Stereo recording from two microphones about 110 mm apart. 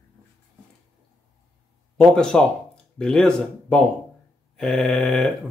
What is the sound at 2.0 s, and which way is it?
Speech, 5° left (ahead or behind).